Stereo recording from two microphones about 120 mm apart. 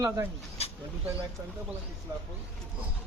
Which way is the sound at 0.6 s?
60° left (ahead or behind).